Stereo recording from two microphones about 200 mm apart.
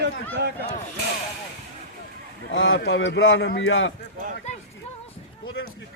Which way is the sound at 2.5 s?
75° left (ahead or behind).